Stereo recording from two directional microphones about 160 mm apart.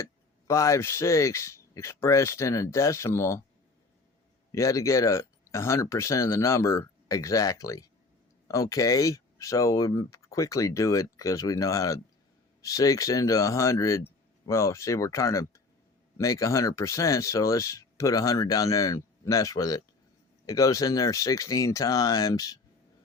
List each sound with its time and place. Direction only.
0.0 s speech: 20° left (ahead or behind)
4.5 s speech: 20° left (ahead or behind)